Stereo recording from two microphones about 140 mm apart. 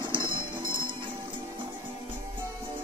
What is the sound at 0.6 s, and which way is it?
Music, 35° right (ahead or behind).